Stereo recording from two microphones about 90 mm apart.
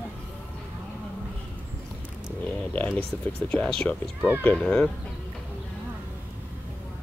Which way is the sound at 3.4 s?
10° left (ahead or behind).